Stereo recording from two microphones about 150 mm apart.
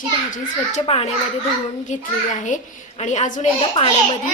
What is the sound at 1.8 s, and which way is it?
A child's voice, 55° left (ahead or behind).